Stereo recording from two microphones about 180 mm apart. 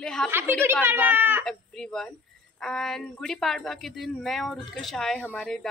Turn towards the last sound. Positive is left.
turn(degrees=5)  # may be behind; listen again after turning